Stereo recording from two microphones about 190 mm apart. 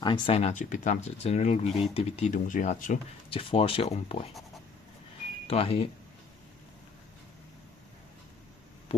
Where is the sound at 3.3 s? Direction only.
30° left (ahead or behind).